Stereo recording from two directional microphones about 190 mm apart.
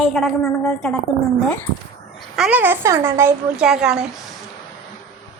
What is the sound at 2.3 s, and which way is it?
Speech, 5° right (ahead or behind).